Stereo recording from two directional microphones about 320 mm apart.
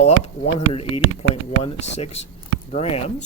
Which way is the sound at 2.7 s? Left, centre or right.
Centre.